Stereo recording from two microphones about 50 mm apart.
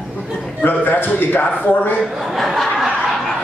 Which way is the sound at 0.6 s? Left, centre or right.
Left.